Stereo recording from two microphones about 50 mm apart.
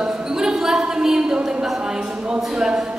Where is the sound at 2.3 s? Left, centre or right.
Centre.